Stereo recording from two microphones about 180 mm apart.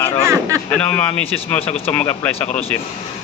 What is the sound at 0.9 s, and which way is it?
Speech, 10° left (ahead or behind).